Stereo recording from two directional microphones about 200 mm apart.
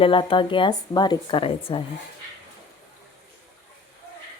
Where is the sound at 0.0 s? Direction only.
25° left (ahead or behind).